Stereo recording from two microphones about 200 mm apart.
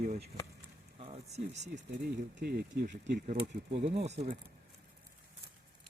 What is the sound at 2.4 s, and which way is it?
Speech, 50° right (ahead or behind).